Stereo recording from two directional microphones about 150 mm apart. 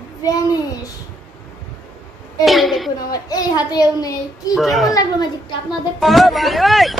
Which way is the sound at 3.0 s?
25° left (ahead or behind).